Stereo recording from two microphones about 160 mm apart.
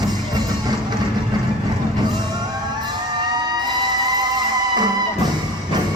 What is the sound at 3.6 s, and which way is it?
Fire engine, 25° right (ahead or behind).